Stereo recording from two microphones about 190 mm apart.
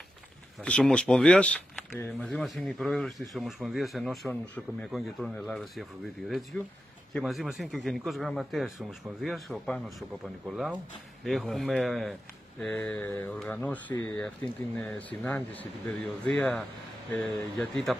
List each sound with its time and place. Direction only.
0.6 s speech: 5° left (ahead or behind)